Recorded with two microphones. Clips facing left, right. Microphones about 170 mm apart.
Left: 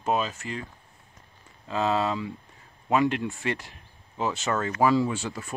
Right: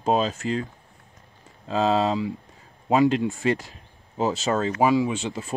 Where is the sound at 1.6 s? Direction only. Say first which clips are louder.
Right 4 dB; 30° right (ahead or behind).